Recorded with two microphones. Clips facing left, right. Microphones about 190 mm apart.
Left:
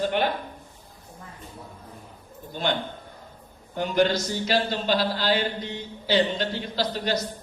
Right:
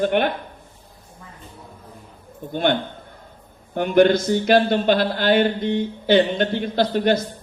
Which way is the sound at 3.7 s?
55° right (ahead or behind).